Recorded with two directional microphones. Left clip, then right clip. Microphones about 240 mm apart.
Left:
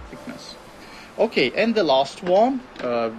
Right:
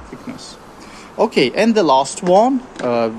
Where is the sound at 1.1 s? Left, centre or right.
Right.